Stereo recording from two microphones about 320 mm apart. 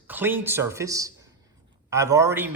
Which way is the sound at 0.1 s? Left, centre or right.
Centre.